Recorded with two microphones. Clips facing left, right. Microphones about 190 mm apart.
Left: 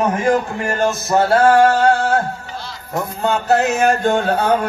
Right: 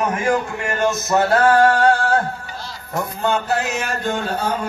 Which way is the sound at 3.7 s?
55° left (ahead or behind).